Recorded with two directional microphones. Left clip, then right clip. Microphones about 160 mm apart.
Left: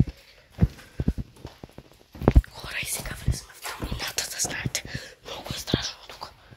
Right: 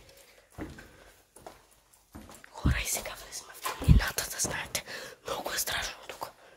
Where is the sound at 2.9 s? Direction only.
50° right (ahead or behind).